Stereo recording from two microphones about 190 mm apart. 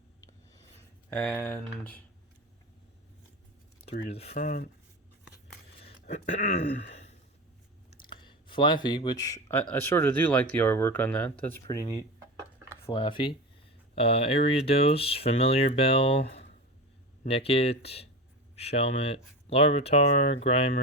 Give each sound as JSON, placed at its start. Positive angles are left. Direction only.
{"t": 0.2, "sound": "a sound", "side_deg": 20}
{"t": 1.1, "sound": "speech", "side_deg": 10}
{"t": 3.8, "sound": "speech", "side_deg": 30}
{"t": 5.8, "sound": "throat clearing", "side_deg": 35}
{"t": 7.9, "sound": "speech", "side_deg": 25}